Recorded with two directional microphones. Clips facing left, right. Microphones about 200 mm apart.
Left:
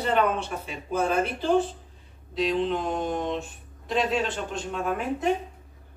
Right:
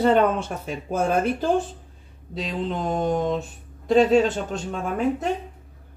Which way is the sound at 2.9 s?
40° right (ahead or behind).